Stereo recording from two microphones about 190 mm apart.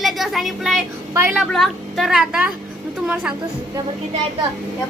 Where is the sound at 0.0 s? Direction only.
Centre (ahead or behind).